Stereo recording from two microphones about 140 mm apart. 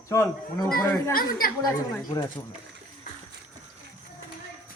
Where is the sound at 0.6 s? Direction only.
90° left.